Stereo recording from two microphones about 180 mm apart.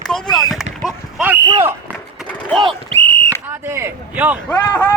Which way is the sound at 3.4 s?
15° right (ahead or behind).